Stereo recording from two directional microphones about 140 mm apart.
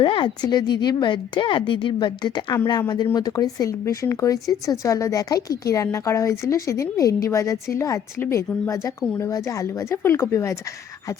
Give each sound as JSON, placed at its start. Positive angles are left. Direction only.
{"t": 0.0, "sound": "a woman's voice", "side_deg": 35}